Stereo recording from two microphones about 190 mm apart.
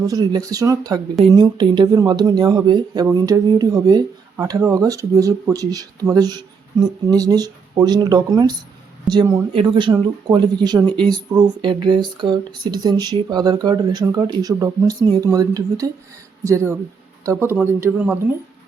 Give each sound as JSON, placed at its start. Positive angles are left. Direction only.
{"t": 0.0, "sound": "speech", "side_deg": -20}